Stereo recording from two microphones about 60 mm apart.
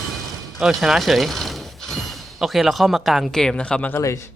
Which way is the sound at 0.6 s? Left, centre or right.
Centre.